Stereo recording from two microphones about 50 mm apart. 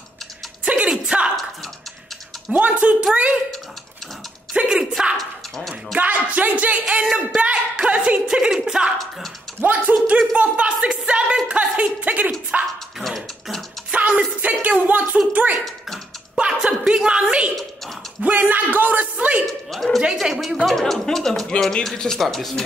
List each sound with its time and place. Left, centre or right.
1.1 s drip: right
2.5 s speech: right
4.6 s speech: centre
5.1 s a sound: centre
5.9 s speech: right
9.6 s a man's voice: right
13.0 s beatboxing: centre
13.9 s music: right
15.3 s a man's voice: right
16.3 s a woman's voice: centre
18.2 s a man's voice: right
19.4 s speech: centre
22.2 s speech: centre